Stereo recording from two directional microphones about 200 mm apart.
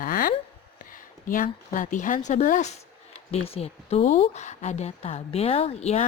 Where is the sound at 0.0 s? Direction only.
45° left (ahead or behind).